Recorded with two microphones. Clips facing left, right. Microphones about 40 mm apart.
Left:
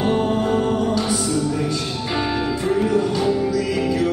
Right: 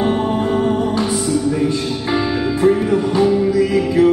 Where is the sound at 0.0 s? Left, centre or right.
Right.